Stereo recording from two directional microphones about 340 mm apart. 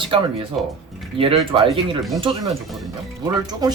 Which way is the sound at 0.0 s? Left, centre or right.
Centre.